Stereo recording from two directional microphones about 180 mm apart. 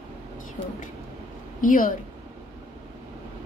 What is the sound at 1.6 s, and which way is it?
Speech, 50° left (ahead or behind).